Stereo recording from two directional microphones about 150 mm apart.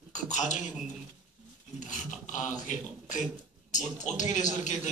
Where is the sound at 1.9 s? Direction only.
55° left (ahead or behind).